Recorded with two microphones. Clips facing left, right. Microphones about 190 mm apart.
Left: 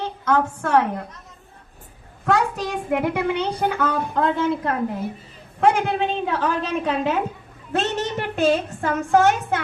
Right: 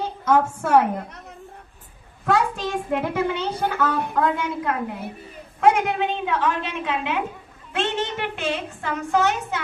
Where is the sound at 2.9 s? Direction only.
15° left (ahead or behind).